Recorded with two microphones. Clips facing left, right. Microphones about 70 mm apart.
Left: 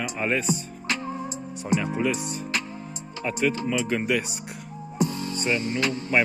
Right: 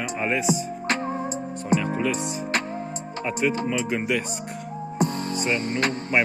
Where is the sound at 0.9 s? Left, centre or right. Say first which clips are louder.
Right 3 dB; right.